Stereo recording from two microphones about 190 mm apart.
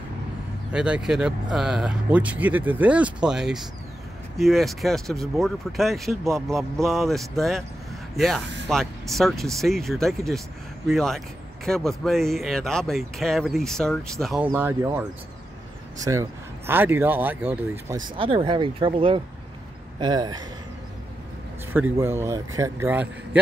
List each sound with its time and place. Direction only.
0.7 s speech: 5° right (ahead or behind)
14.5 s speech: 10° right (ahead or behind)
21.7 s speech: 10° right (ahead or behind)